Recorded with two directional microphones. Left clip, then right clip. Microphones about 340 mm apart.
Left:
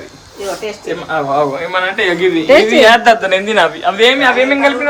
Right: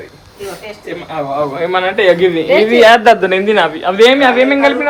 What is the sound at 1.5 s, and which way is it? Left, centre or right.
A man's voice, centre.